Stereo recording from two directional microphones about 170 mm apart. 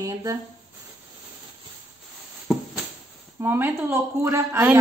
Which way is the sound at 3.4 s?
10° right (ahead or behind).